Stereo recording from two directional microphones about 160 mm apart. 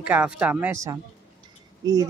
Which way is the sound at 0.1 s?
10° right (ahead or behind).